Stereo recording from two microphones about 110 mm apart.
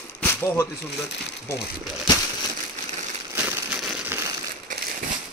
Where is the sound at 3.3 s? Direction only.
20° right (ahead or behind).